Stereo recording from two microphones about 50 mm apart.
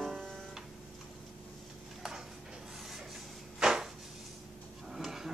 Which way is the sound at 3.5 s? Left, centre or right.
Centre.